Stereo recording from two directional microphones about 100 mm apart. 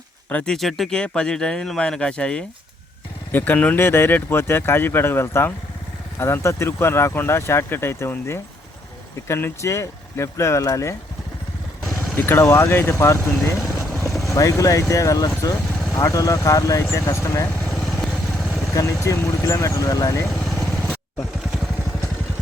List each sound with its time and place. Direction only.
0.3 s speech: 15° left (ahead or behind)
0.5 s speech: centre (ahead or behind); by 10.9 s 35° left (ahead or behind)
11.9 s speech: 25° left (ahead or behind)
14.0 s boat: centre (ahead or behind)
14.3 s speech: 35° left (ahead or behind)
17.6 s vehicle: 5° left (ahead or behind)
18.7 s speech: 30° left (ahead or behind)
20.3 s vehicle: 5° left (ahead or behind)
20.7 s vehicle: 15° left (ahead or behind)